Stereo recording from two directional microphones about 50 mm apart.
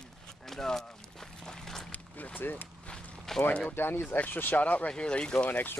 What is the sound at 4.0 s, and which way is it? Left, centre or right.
Speech, left.